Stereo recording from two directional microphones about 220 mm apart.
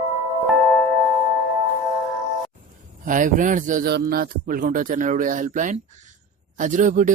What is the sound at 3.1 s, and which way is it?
A man's voice, 35° right (ahead or behind).